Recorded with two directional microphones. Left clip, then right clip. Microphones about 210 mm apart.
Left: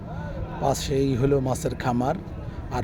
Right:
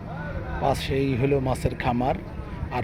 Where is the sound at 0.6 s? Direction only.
15° left (ahead or behind).